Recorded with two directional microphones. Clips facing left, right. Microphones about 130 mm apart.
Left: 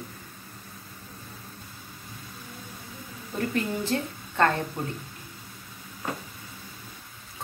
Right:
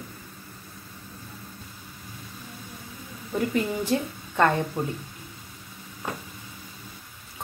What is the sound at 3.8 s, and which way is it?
Speech, 15° right (ahead or behind).